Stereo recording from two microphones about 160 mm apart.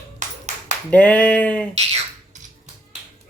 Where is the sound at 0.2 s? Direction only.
50° right (ahead or behind).